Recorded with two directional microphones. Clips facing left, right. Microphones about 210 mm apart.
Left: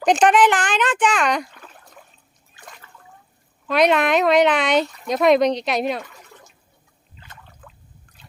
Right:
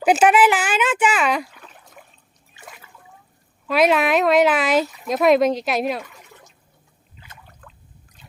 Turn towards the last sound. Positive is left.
turn(degrees=5)  # may be behind; listen again after turning